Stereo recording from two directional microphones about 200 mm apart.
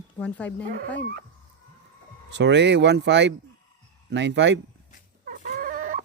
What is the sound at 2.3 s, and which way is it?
Speech, 60° right (ahead or behind).